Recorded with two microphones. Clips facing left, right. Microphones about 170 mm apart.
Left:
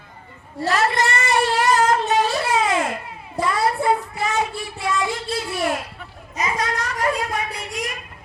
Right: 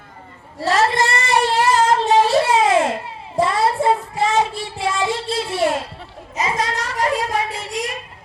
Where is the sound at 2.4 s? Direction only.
30° right (ahead or behind).